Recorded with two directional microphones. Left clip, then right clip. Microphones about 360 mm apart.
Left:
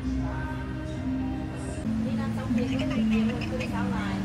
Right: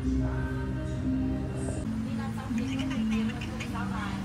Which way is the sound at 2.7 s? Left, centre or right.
Centre.